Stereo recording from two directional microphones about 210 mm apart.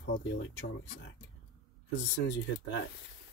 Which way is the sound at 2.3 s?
60° left (ahead or behind).